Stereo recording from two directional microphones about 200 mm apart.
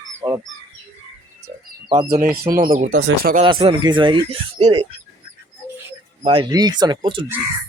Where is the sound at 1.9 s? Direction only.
15° right (ahead or behind).